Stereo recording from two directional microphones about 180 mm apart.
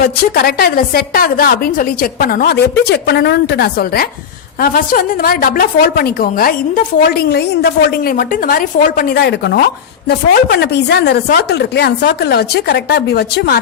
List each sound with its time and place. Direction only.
0.0 s a woman's voice: 60° left (ahead or behind)